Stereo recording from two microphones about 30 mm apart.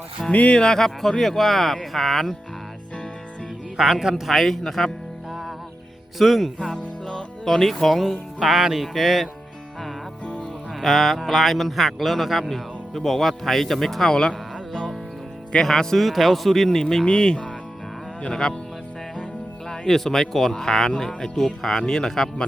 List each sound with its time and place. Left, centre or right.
0.2 s speech: centre
3.8 s speech: centre
4.3 s speech: centre
6.1 s speech: centre
10.8 s mantra: centre
11.3 s speech: centre
14.1 s music: left
15.6 s speech: centre
16.0 s speech: centre
17.1 s speech: left
19.7 s speech: centre
21.2 s speech: centre